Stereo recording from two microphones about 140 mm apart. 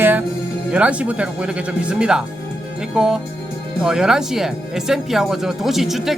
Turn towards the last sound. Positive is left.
turn(degrees=0)  # may be behind; listen again after turning